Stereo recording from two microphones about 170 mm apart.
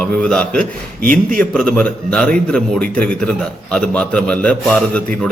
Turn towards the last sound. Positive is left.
turn(degrees=5)  # may be behind; listen again after turning